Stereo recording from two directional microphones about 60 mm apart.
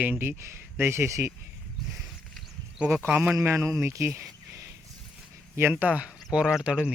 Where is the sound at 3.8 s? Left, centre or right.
Right.